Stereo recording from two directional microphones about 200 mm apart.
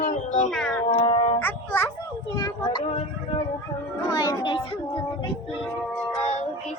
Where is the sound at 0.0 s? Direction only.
40° left (ahead or behind).